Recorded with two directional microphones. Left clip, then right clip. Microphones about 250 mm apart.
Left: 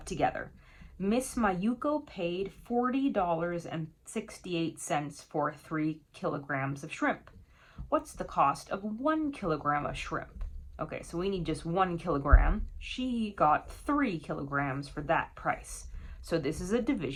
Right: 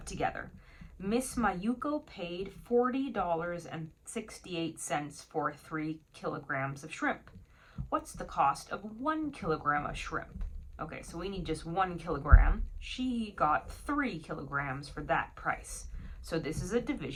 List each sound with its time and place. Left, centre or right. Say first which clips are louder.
0.0 s speech: left 4 dB; left